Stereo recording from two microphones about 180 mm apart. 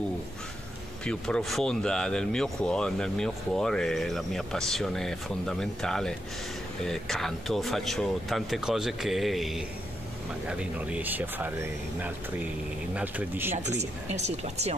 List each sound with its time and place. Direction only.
1.0 s speech: 5° left (ahead or behind)
13.6 s speech: 40° right (ahead or behind)